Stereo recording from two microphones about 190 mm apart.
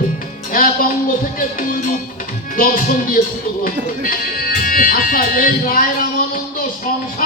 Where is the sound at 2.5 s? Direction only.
45° left (ahead or behind).